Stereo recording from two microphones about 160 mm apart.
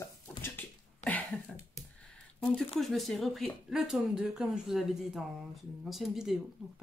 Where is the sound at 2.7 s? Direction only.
Centre (ahead or behind).